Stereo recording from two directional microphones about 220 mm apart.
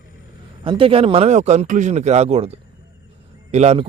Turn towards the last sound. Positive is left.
turn(degrees=-25)  # may be behind; listen again after turning